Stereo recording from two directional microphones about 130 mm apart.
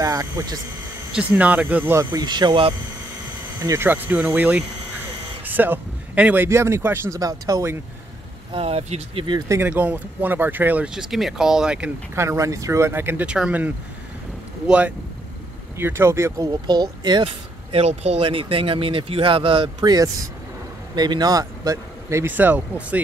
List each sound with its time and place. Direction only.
0.0 s speech: 25° right (ahead or behind)
1.1 s speech: 10° right (ahead or behind)
2.0 s speech: 35° right (ahead or behind)
3.6 s speech: 20° right (ahead or behind)
8.5 s speech: 55° right (ahead or behind)
9.5 s speech: 15° right (ahead or behind)
12.2 s speech: 25° right (ahead or behind)
16.6 s speech: 35° right (ahead or behind); by 22.9 s 10° right (ahead or behind)